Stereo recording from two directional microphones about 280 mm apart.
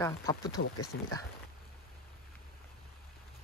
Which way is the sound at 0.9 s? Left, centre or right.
Left.